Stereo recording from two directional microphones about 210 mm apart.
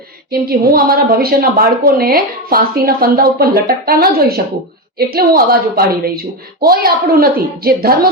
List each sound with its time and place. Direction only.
0.3 s a woman's voice: 45° right (ahead or behind)